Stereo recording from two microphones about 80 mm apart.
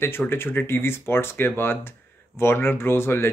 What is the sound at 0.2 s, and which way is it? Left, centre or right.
Speech, left.